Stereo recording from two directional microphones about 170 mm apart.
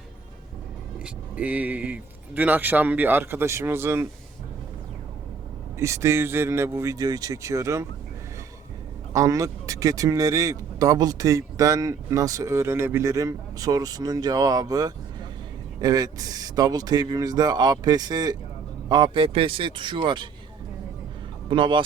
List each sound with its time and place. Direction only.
0.9 s speech: 5° right (ahead or behind)
5.8 s speech: 15° right (ahead or behind)
9.1 s speech: 20° right (ahead or behind)
21.5 s speech: 30° right (ahead or behind)